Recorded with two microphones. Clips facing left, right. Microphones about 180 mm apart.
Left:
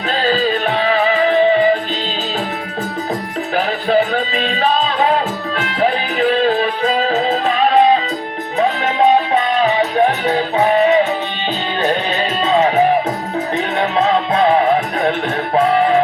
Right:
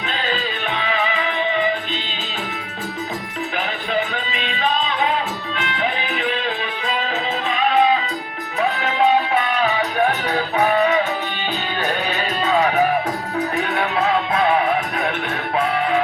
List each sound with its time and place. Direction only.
0.2 s music: 35° left (ahead or behind)
3.5 s music: 35° left (ahead or behind)
10.2 s music: 25° left (ahead or behind)
12.5 s music: 25° left (ahead or behind)